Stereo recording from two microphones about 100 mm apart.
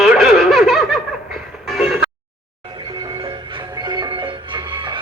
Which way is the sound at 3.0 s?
60° right (ahead or behind).